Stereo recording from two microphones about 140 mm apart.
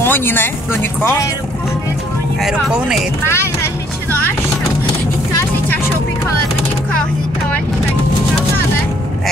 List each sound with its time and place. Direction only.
0.0 s speech: 15° left (ahead or behind)
2.4 s speech: 5° right (ahead or behind)
3.3 s vehicle: 15° left (ahead or behind)